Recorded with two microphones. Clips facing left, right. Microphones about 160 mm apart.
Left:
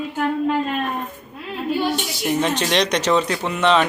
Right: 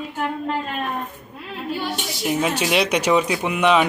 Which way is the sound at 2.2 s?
5° right (ahead or behind).